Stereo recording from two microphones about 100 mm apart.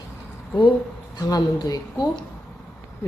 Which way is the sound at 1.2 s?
40° left (ahead or behind).